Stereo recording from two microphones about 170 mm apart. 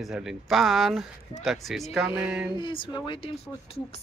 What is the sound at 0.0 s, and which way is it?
Speech, 5° right (ahead or behind).